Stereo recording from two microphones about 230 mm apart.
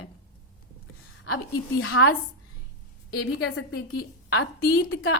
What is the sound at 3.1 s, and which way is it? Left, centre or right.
A woman's voice, left.